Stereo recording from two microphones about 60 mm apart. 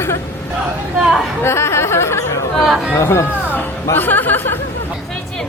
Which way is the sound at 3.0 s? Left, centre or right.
Left.